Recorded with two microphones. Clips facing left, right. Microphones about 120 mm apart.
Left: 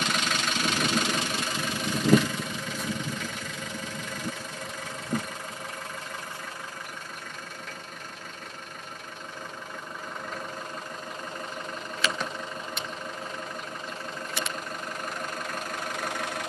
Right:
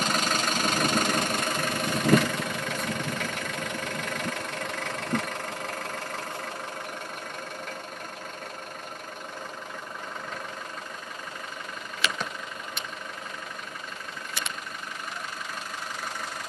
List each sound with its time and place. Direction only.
0.0 s engine: 40° right (ahead or behind); by 5.9 s 80° right
16.0 s engine: 70° left (ahead or behind)